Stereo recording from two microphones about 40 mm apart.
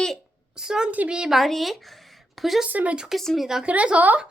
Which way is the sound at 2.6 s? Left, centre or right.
Right.